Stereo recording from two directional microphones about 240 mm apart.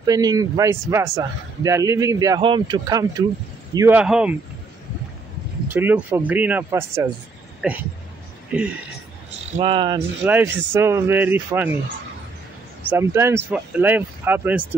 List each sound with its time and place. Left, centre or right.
0.0 s speech: centre
5.7 s speech: centre
9.6 s speech: right
10.2 s speech: centre
12.9 s speech: centre